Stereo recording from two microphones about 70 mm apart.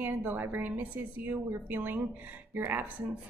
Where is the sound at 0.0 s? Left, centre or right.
Right.